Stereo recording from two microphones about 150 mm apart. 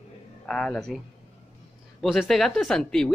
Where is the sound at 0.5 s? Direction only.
5° left (ahead or behind).